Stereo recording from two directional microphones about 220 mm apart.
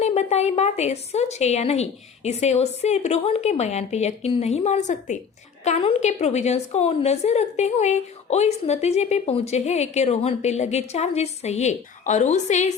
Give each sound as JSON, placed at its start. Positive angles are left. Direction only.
{"t": 0.0, "sound": "a woman's voice", "side_deg": 30}